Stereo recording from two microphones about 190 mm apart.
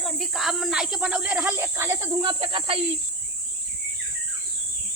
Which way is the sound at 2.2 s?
25° right (ahead or behind).